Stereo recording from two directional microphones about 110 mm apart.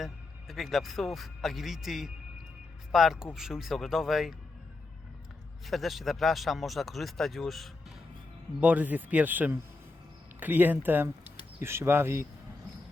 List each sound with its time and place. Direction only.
0.0 s a man's voice: centre (ahead or behind)
5.6 s a man's voice: centre (ahead or behind)
8.6 s speech: 15° right (ahead or behind)